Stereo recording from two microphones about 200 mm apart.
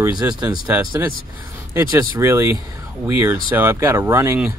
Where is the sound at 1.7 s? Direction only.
15° right (ahead or behind).